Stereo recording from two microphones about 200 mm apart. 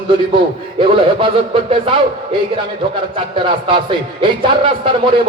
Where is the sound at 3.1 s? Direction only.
25° right (ahead or behind).